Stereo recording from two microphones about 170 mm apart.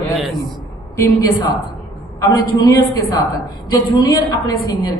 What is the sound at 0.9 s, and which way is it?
A woman's voice, 15° left (ahead or behind).